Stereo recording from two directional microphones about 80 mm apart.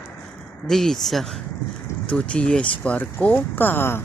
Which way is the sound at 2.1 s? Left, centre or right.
Centre.